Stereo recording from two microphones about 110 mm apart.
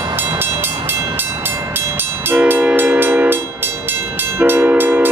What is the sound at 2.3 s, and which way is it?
Train, 15° right (ahead or behind).